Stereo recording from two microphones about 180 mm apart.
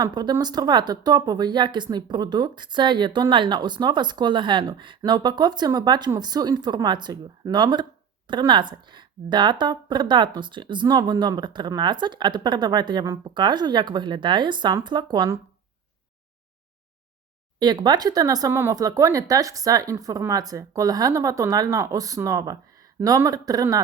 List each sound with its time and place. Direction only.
0.0 s speech: 25° right (ahead or behind)
17.6 s speech: 25° right (ahead or behind)